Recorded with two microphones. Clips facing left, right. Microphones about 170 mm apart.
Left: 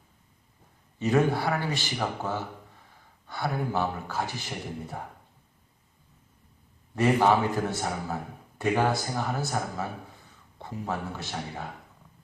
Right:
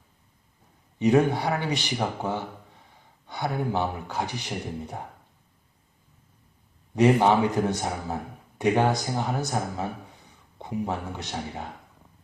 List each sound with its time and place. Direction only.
0.9 s speech: 15° right (ahead or behind)
6.9 s a man's voice: 20° right (ahead or behind)